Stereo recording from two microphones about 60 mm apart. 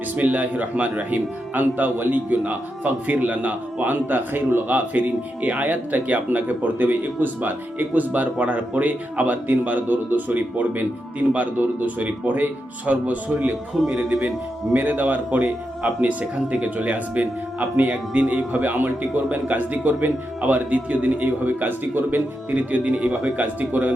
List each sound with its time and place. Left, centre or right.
0.2 s a man's voice: right